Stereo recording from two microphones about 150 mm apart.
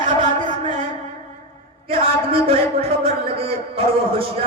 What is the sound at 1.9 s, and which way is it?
Speech, 40° right (ahead or behind).